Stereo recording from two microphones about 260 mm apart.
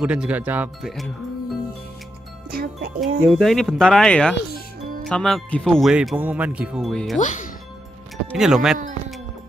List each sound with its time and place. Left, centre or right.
0.0 s speech: centre
2.5 s music: right
3.0 s speech: centre
7.2 s speech: left
8.4 s speech: centre